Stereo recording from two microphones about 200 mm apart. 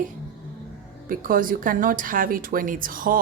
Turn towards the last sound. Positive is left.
turn(degrees=-45)  # may be behind; listen again after turning